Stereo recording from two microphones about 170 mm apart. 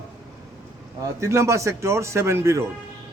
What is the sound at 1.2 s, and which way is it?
Speech, 15° right (ahead or behind).